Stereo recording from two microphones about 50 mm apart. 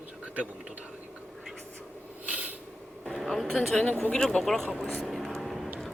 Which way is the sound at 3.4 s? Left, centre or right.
Centre.